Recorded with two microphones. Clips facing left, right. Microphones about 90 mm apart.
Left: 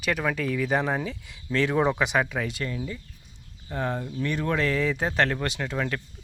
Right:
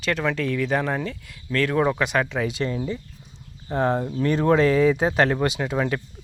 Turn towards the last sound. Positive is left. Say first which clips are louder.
# right 5 dB
turn(degrees=-15)  # may be behind; listen again after turning